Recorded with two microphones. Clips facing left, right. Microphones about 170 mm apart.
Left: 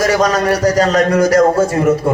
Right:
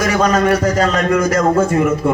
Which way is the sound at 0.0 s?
40° left (ahead or behind).